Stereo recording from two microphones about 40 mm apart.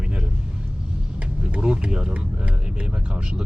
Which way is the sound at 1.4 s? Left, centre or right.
Right.